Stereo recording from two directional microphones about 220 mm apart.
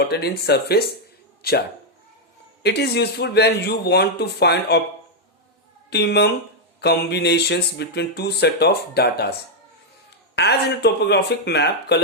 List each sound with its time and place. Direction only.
0.0 s speech: 45° left (ahead or behind)
2.6 s speech: 50° left (ahead or behind)
5.9 s speech: 50° left (ahead or behind)
10.3 s speech: 50° left (ahead or behind)